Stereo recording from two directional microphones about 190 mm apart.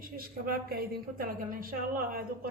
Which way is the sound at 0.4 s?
50° right (ahead or behind).